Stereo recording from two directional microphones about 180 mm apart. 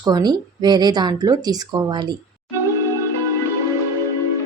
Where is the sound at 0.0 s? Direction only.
20° right (ahead or behind).